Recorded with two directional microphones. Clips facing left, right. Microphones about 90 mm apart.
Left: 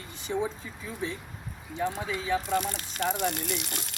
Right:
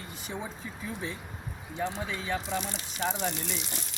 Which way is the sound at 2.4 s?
50° left (ahead or behind).